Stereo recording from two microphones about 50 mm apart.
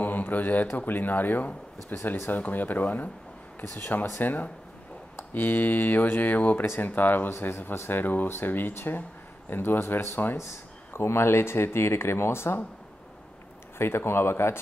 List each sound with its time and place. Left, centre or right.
0.0 s a sound: left
0.7 s speech: left
7.3 s speech: left
8.0 s speech: left
10.3 s speech: left
13.7 s speech: left